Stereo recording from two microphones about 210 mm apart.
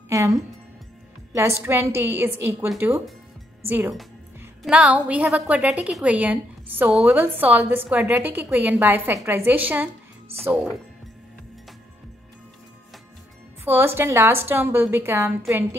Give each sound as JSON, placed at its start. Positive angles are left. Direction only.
{"t": 0.1, "sound": "a woman's voice", "side_deg": -15}
{"t": 1.6, "sound": "a woman's voice", "side_deg": -10}
{"t": 13.7, "sound": "a woman's voice", "side_deg": -10}